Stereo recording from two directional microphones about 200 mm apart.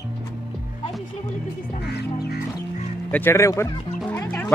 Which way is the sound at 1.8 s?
55° left (ahead or behind).